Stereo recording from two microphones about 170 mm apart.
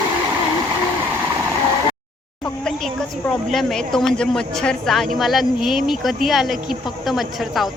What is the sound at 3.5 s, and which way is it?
A woman's voice, 5° left (ahead or behind).